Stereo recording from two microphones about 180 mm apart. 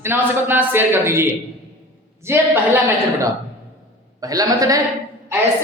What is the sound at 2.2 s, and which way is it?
Speech, 10° right (ahead or behind).